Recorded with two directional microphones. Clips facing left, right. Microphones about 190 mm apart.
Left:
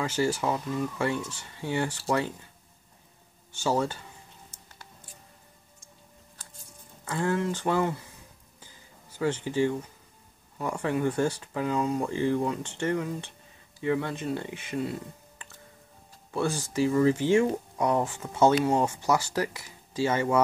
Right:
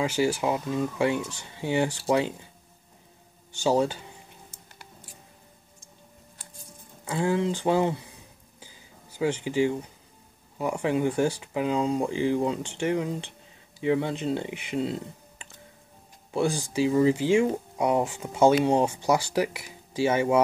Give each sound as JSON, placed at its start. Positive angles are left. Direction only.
{"t": 0.0, "sound": "speech", "side_deg": -10}
{"t": 3.5, "sound": "speech", "side_deg": -15}
{"t": 7.1, "sound": "speech", "side_deg": -10}
{"t": 9.2, "sound": "speech", "side_deg": -10}